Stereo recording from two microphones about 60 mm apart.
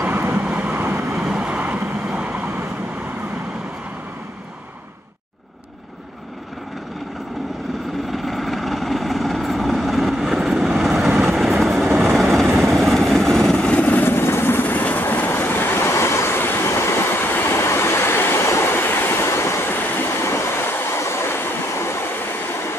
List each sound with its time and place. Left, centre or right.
0.0 s vehicle: right
1.1 s vehicle: centre
1.6 s vehicle: right
8.1 s vehicle: centre; by 14.0 s left
14.0 s vehicle: left
16.3 s train: left
18.7 s train: left